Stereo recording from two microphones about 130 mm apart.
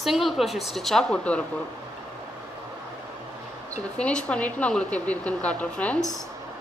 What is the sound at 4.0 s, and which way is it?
Speech, 5° left (ahead or behind).